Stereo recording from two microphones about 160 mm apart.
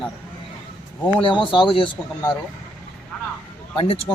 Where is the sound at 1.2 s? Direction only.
30° left (ahead or behind).